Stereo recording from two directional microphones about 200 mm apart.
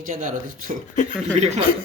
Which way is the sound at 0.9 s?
40° left (ahead or behind).